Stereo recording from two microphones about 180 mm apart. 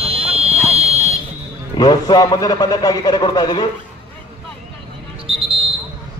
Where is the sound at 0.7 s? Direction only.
35° right (ahead or behind).